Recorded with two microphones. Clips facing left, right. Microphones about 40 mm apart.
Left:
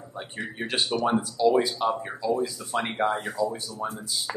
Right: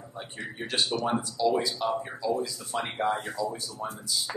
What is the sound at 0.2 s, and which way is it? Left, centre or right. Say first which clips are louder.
A man's voice: left 4 dB; centre.